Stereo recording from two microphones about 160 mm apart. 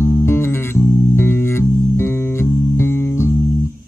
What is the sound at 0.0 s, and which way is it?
Music, 15° left (ahead or behind).